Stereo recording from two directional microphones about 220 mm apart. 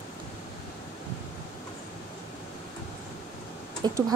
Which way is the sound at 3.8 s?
15° right (ahead or behind).